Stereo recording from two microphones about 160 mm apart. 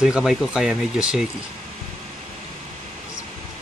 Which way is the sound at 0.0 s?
5° right (ahead or behind).